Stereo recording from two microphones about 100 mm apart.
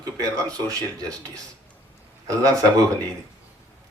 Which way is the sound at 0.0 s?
35° right (ahead or behind).